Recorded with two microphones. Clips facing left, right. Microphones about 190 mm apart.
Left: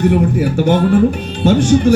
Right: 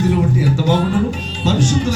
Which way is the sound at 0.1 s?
55° left (ahead or behind).